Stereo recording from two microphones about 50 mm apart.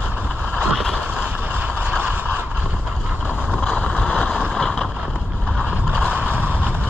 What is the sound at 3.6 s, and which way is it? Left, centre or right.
Boat, left.